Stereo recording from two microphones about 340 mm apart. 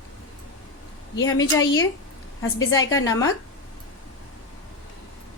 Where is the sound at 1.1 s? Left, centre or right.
Left.